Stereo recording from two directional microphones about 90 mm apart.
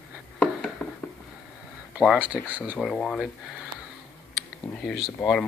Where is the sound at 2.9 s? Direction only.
10° left (ahead or behind).